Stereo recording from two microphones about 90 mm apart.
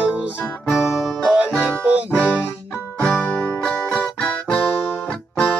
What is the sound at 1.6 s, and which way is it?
Music, 15° right (ahead or behind).